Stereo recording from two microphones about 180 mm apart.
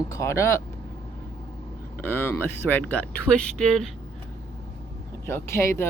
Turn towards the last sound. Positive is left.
turn(degrees=15)  # may be behind; listen again after turning